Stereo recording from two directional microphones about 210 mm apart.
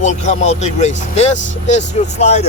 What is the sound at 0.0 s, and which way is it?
A man's voice, 35° left (ahead or behind).